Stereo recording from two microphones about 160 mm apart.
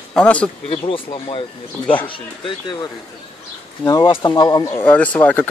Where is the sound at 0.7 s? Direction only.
35° left (ahead or behind).